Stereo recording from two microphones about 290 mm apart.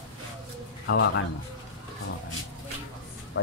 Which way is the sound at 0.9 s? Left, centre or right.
Left.